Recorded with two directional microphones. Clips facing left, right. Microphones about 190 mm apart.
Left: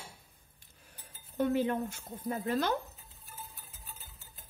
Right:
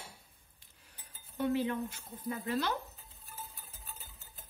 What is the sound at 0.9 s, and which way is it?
Speech, 50° left (ahead or behind).